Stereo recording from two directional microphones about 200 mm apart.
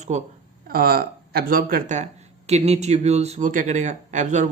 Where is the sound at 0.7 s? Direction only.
50° right (ahead or behind).